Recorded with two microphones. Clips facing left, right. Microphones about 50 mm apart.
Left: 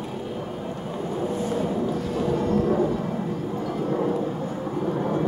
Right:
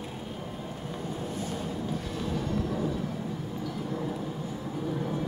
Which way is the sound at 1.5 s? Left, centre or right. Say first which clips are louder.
Left 8 dB; left.